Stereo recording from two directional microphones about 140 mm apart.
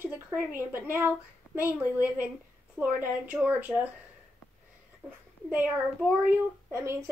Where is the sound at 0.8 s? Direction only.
15° right (ahead or behind).